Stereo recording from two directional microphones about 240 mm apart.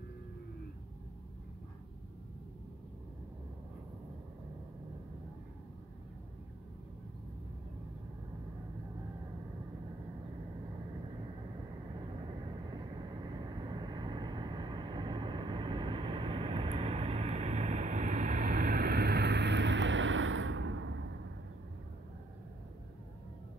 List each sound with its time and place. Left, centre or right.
12.3 s vehicle: centre; by 21.0 s right